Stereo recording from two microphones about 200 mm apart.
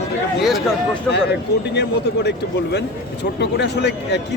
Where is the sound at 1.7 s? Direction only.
60° left (ahead or behind).